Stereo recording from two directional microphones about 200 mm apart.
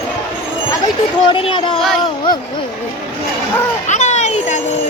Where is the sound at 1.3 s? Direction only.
25° left (ahead or behind).